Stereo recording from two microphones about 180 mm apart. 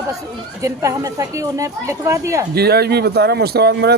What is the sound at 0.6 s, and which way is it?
Speech, 15° right (ahead or behind).